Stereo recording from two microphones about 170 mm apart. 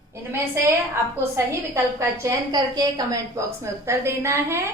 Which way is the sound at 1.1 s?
15° right (ahead or behind).